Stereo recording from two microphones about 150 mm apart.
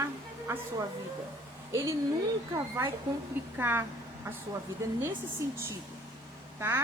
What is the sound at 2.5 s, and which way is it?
A woman's voice, 20° right (ahead or behind).